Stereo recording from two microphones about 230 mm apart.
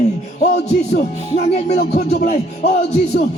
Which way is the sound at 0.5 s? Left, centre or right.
Left.